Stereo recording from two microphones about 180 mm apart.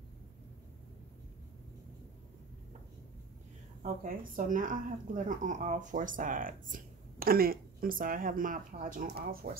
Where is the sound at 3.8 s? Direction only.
45° right (ahead or behind).